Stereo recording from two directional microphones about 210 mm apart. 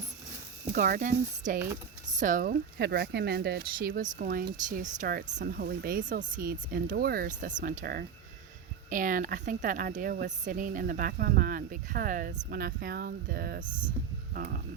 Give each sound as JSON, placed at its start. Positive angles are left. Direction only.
{"t": 0.7, "sound": "speech", "side_deg": -40}
{"t": 2.7, "sound": "speech", "side_deg": -50}